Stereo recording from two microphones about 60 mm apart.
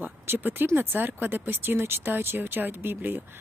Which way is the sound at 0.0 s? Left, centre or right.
Right.